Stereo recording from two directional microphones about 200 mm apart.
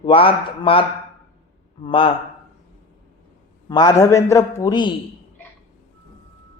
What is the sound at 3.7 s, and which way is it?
A man's voice, 20° left (ahead or behind).